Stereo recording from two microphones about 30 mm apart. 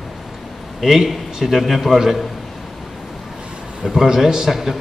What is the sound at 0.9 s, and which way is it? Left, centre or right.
A man's voice, centre.